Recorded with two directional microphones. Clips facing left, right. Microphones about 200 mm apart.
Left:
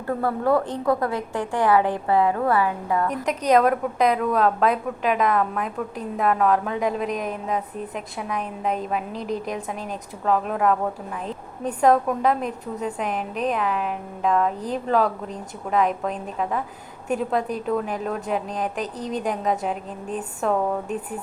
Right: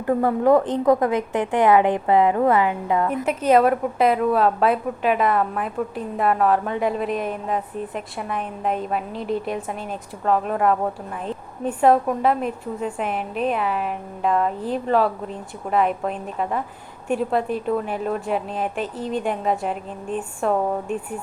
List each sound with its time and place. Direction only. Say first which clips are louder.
0.0 s a woman's voice: right 5 dB; 15° right (ahead or behind)
3.2 s a woman's voice: right 2 dB; 5° right (ahead or behind)